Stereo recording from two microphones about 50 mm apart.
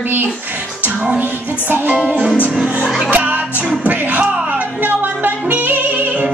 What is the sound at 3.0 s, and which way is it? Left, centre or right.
Speech, right.